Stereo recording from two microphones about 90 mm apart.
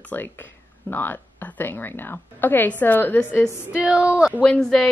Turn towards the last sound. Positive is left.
turn(degrees=5)  # may be behind; listen again after turning